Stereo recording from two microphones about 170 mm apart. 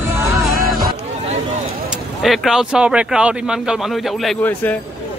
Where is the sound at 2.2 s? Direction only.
Centre (ahead or behind).